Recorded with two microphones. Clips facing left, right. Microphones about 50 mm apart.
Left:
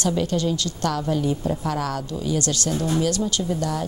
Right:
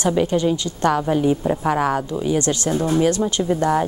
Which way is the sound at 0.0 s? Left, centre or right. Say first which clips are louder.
Right 4 dB; right.